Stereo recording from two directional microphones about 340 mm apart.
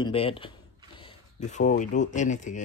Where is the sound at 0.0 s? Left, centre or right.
Centre.